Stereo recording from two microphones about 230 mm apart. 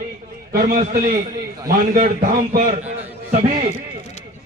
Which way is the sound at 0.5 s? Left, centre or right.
Right.